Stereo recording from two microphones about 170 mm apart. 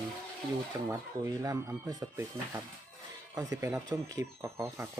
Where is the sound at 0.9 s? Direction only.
15° right (ahead or behind).